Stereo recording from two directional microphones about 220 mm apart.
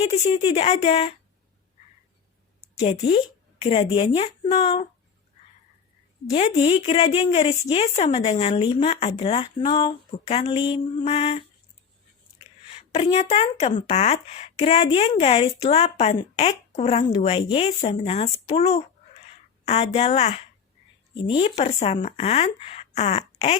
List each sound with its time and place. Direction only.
0.0 s speech: 30° left (ahead or behind)
2.8 s speech: 30° left (ahead or behind)
6.3 s speech: 30° left (ahead or behind)
12.9 s speech: 30° left (ahead or behind)